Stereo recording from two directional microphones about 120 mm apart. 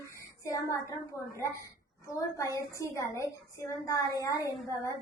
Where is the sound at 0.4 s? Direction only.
25° left (ahead or behind).